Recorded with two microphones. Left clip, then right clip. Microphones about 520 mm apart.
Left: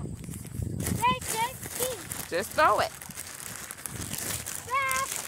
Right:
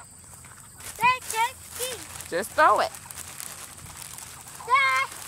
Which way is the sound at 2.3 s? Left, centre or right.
Left.